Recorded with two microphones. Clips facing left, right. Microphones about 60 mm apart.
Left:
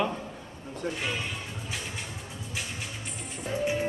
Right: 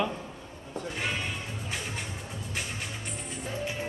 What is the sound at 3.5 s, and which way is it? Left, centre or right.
Music, centre.